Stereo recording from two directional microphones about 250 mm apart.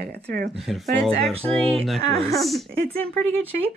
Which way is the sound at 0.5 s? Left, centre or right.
Centre.